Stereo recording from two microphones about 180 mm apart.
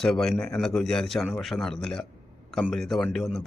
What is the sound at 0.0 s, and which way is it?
A man's voice, 5° left (ahead or behind).